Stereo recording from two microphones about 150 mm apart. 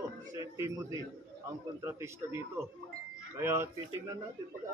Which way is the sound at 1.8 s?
15° right (ahead or behind).